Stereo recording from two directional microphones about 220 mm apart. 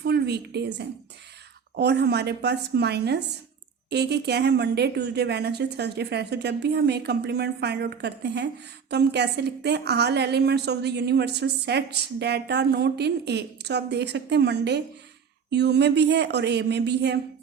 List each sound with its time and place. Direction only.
0.0 s a woman's voice: 45° right (ahead or behind)